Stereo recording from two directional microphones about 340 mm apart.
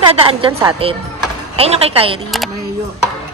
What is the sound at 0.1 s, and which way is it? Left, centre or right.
A woman's voice, centre.